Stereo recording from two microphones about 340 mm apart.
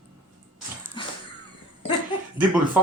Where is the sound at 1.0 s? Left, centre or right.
Centre.